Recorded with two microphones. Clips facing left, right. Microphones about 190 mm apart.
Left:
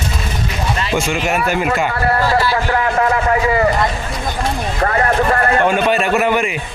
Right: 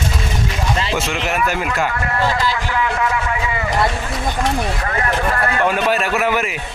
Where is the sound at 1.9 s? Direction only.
35° left (ahead or behind).